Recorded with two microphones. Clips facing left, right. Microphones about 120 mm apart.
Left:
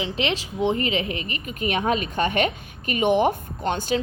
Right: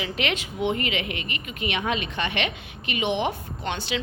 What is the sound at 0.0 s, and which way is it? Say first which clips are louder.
A woman's voice: left 2 dB; 30° left (ahead or behind).